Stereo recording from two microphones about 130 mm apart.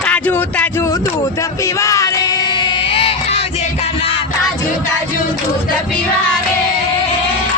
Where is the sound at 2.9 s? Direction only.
45° left (ahead or behind).